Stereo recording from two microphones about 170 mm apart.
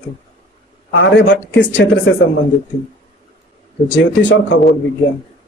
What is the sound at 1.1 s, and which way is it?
Speech, 90° left.